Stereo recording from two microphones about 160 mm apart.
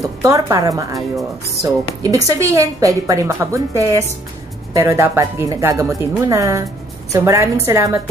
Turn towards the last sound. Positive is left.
turn(degrees=-20)  # may be behind; listen again after turning